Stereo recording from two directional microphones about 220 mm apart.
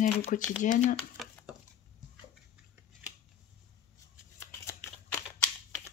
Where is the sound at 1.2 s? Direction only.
Centre (ahead or behind).